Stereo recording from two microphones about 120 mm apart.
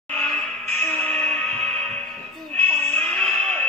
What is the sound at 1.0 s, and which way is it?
Music, 10° left (ahead or behind).